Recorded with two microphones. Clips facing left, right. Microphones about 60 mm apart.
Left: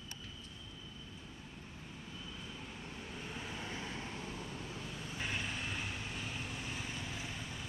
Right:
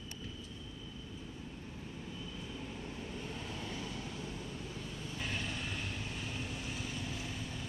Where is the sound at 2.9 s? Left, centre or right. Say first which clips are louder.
Right 2 dB; centre; by 4.4 s left.